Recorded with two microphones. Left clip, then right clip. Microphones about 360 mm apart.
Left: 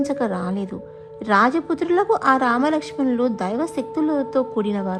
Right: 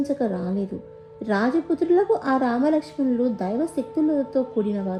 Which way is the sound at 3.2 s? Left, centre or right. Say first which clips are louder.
Left 2 dB; centre.